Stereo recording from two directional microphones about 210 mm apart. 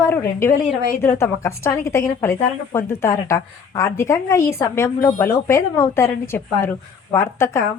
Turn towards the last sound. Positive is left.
turn(degrees=15)  # may be behind; listen again after turning